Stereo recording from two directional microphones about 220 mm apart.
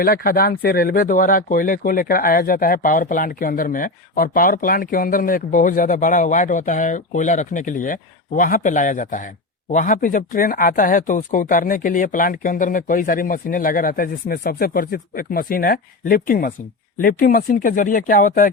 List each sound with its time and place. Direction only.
0.0 s speech: 40° left (ahead or behind)